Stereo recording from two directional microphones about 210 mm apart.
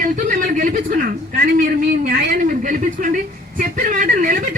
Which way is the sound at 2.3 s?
40° right (ahead or behind).